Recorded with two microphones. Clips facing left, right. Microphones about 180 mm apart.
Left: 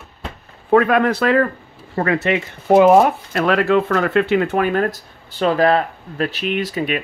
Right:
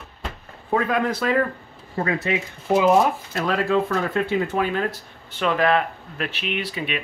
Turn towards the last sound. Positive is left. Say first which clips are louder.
# left 6 dB
turn(degrees=45)  # may be behind; listen again after turning